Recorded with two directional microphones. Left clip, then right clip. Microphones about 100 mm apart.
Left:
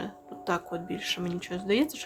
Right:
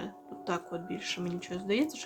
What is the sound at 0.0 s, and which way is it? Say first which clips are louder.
Speech: left 4 dB; 45° left (ahead or behind).